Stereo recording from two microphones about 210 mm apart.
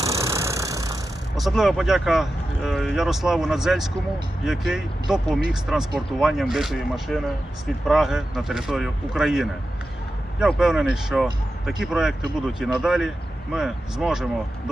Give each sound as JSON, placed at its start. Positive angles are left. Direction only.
{"t": 0.0, "sound": "vehicle", "side_deg": -15}
{"t": 1.4, "sound": "speech", "side_deg": 0}